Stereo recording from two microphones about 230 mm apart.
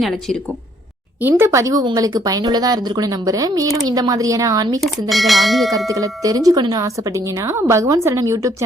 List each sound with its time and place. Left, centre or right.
1.2 s speech: centre
4.8 s speech: centre
5.9 s speech: centre